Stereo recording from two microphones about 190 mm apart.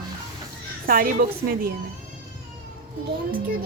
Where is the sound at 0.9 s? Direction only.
50° right (ahead or behind).